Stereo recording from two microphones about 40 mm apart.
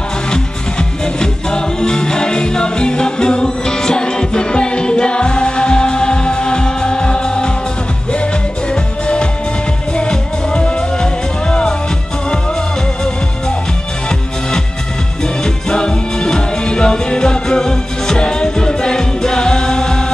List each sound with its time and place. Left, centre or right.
0.3 s music: centre
9.0 s music: left
15.4 s music: left